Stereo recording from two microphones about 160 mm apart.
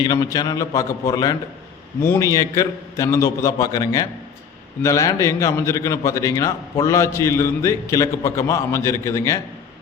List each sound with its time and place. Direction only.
0.0 s a man's voice: 25° left (ahead or behind)